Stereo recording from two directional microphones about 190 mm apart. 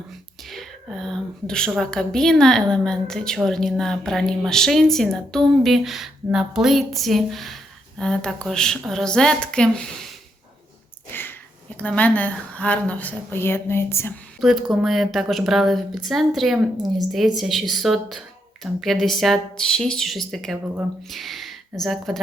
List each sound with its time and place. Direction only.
0.4 s a woman's voice: centre (ahead or behind)
11.1 s a sound: 10° left (ahead or behind)
11.8 s a woman's voice: 10° left (ahead or behind)
14.4 s a woman's voice: centre (ahead or behind)
16.7 s speech: 20° right (ahead or behind)
17.1 s a woman's voice: centre (ahead or behind)